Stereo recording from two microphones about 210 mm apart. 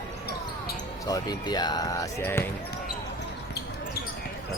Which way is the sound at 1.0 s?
15° left (ahead or behind).